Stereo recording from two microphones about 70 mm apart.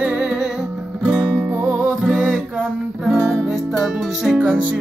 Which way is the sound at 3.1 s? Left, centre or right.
Right.